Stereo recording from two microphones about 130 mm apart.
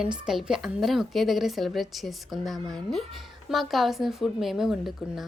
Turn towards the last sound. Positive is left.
turn(degrees=0)  # may be behind; listen again after turning